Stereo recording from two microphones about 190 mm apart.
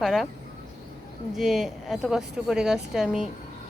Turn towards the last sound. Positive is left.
turn(degrees=0)  # may be behind; listen again after turning